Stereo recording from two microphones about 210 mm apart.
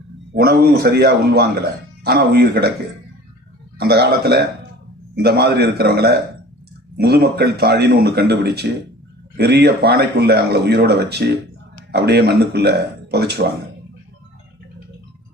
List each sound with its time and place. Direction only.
0.3 s speech: 45° right (ahead or behind)
3.8 s speech: 50° right (ahead or behind)